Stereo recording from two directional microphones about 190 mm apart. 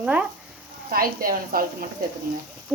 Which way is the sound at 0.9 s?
50° right (ahead or behind).